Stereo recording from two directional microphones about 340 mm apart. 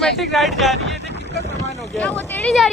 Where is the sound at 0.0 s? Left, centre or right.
Centre.